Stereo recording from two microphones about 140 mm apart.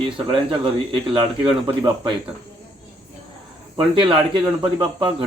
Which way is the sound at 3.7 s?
35° right (ahead or behind).